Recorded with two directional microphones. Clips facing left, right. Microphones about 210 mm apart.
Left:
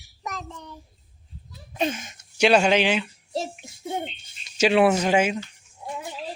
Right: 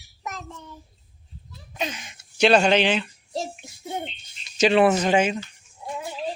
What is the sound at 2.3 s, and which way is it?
Speech, 10° left (ahead or behind).